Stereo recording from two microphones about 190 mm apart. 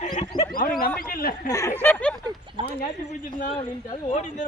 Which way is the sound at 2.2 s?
25° right (ahead or behind).